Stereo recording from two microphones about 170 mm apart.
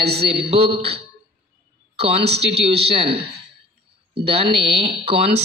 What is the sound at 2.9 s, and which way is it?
Speech, 30° right (ahead or behind).